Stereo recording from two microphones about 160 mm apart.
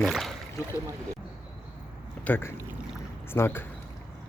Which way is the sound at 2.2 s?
10° left (ahead or behind).